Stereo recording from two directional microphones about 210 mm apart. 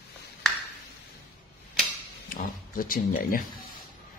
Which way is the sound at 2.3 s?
40° left (ahead or behind).